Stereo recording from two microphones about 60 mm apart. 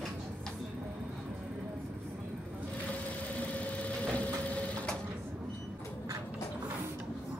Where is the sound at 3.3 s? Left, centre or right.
Left.